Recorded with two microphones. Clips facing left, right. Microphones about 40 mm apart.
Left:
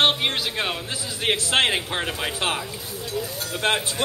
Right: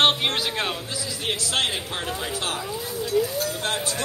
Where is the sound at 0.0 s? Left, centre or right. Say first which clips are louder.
Even; centre.